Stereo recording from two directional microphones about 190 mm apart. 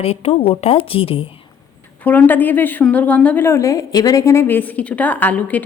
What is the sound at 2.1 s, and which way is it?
A woman's voice, 10° left (ahead or behind).